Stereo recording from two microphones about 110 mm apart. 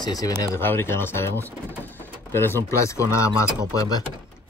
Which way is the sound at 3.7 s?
30° left (ahead or behind).